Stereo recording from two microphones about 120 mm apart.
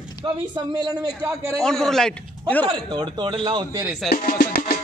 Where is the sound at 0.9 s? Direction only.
30° right (ahead or behind).